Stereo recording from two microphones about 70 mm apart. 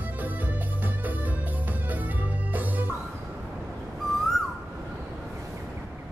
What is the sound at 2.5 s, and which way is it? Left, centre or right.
Music, right.